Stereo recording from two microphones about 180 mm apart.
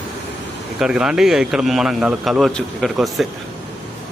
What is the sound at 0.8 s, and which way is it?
A man's voice, 5° right (ahead or behind).